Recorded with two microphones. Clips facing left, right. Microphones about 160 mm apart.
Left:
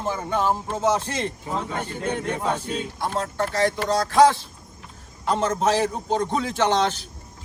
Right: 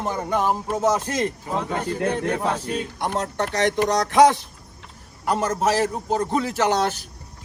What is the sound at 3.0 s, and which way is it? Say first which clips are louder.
A man's voice: even; 20° right (ahead or behind).